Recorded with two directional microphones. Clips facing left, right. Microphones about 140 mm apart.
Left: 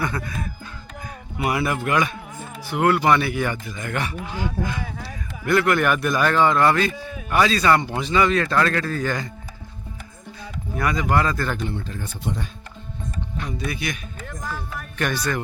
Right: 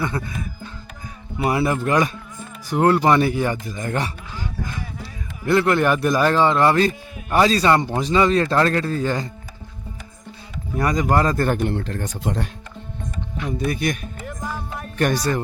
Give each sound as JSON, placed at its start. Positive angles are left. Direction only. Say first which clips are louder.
{"t": 0.0, "sound": "a man's voice", "louder": "right 1 dB", "side_deg": -25}
{"t": 1.4, "sound": "speech", "louder": "right 3 dB", "side_deg": -30}
{"t": 5.5, "sound": "a man's voice", "louder": "right 2 dB", "side_deg": -30}
{"t": 10.8, "sound": "speech", "louder": "right 2 dB", "side_deg": -35}
{"t": 11.7, "sound": "speech", "louder": "right 5 dB", "side_deg": -80}
{"t": 13.3, "sound": "speech", "louder": "right 6 dB", "side_deg": -5}
{"t": 13.7, "sound": "speech", "louder": "right 8 dB", "side_deg": -45}
{"t": 14.3, "sound": "music", "louder": "right 2 dB", "side_deg": -15}
{"t": 14.9, "sound": "speech", "louder": "right 4 dB", "side_deg": -40}